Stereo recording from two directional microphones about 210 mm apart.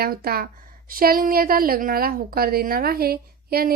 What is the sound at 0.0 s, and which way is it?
A woman's voice, 45° right (ahead or behind).